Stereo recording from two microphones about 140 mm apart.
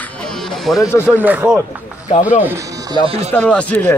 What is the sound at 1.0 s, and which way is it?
Speech, 10° right (ahead or behind).